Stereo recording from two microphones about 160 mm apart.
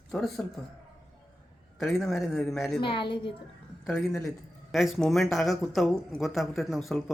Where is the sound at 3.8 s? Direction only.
Centre (ahead or behind).